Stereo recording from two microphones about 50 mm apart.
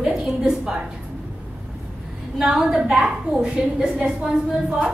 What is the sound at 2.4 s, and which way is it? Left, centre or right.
A woman's voice, centre.